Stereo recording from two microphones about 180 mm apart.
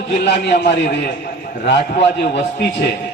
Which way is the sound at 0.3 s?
65° left (ahead or behind).